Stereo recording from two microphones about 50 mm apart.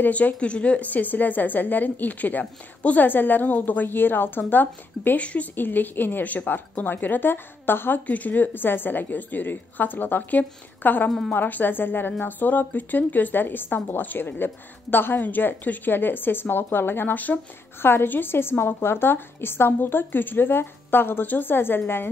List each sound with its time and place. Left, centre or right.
0.0 s a woman's voice: left
5.2 s speech: left
5.6 s a woman's voice: left
8.1 s a woman's voice: left
11.1 s speech: centre
11.3 s a woman's voice: left
17.8 s a woman's voice: left